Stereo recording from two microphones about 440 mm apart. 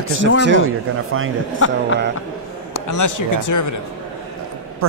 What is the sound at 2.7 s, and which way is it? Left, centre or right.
Speech, left.